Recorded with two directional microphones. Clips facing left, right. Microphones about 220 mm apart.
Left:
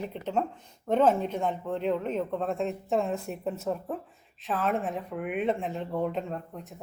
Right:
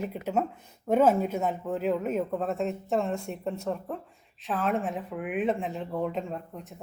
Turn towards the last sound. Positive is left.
turn(degrees=0)  # may be behind; listen again after turning